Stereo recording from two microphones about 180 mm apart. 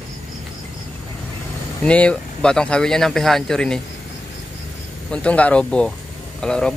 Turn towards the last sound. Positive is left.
turn(degrees=5)  # may be behind; listen again after turning